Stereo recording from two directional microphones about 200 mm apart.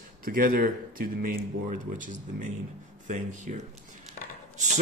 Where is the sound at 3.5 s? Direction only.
45° right (ahead or behind).